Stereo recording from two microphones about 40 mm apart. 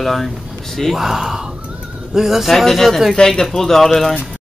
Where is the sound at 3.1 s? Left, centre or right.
Centre.